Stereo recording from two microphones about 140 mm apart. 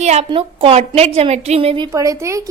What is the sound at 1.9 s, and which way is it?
Speech, 25° right (ahead or behind).